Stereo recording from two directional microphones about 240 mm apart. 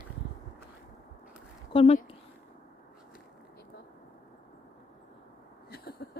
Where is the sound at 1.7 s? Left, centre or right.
Left.